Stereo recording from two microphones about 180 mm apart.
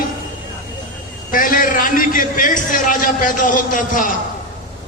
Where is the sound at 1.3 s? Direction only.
50° left (ahead or behind).